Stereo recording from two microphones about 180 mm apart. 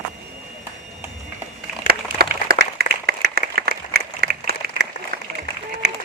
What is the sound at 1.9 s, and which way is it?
Applause, 60° right (ahead or behind).